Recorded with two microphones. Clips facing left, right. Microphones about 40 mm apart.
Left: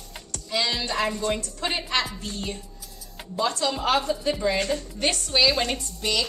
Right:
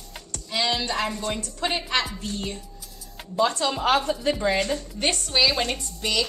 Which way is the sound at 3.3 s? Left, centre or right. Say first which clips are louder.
Right 2 dB; centre.